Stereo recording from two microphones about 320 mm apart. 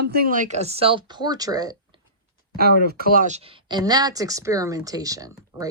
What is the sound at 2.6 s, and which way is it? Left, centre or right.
Speech, right.